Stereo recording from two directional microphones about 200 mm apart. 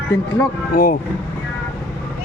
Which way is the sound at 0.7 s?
45° left (ahead or behind).